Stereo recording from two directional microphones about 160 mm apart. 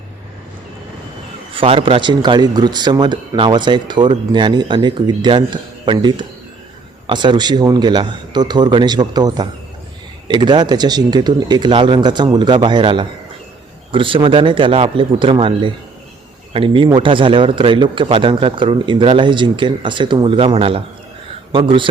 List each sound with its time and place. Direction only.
1.5 s a man's voice: 35° right (ahead or behind)